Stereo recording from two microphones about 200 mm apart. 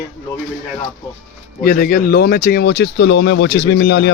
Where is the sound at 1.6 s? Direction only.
50° left (ahead or behind).